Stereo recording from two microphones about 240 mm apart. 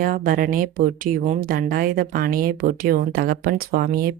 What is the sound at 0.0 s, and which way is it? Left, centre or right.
Speech, right.